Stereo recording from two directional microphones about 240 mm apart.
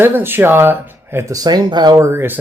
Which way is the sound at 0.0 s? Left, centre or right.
Centre.